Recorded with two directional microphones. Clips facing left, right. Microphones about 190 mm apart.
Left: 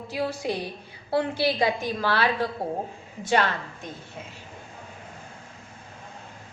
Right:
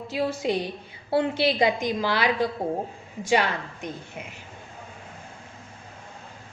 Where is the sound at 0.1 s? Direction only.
25° right (ahead or behind).